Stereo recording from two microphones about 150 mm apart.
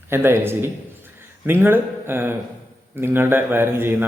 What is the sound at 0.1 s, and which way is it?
A man's voice, 15° right (ahead or behind).